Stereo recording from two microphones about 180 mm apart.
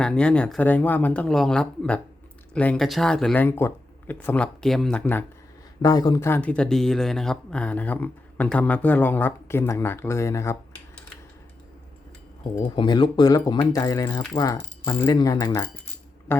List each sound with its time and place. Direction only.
0.0 s speech: 5° left (ahead or behind)
5.8 s speech: 20° left (ahead or behind)
12.4 s speech: 25° left (ahead or behind)